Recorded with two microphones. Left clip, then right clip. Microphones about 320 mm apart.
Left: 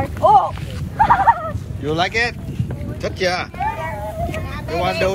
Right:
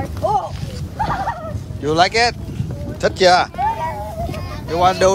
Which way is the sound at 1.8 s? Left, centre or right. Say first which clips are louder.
Right 4 dB; centre.